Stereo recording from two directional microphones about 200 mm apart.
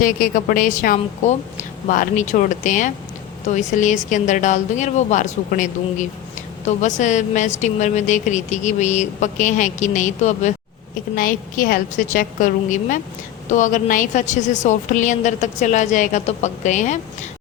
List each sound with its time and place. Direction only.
0.0 s a woman's voice: 45° left (ahead or behind)